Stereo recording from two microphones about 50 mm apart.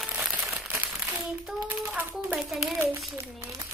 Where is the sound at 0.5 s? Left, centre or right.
Right.